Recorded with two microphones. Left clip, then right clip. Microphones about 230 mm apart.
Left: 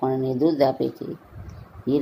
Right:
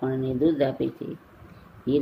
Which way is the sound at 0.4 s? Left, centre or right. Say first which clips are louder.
Left 3 dB; centre.